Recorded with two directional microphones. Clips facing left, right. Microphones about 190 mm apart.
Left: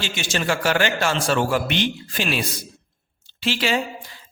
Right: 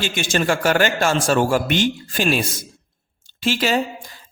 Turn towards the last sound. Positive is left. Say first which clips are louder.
# right 3 dB
turn(degrees=-45)  # may be behind; listen again after turning